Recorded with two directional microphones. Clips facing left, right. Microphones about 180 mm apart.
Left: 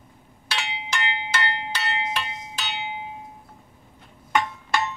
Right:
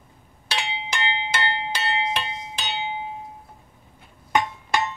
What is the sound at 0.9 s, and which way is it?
Music, 25° right (ahead or behind).